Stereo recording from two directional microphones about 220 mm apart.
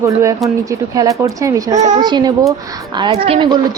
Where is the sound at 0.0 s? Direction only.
15° right (ahead or behind).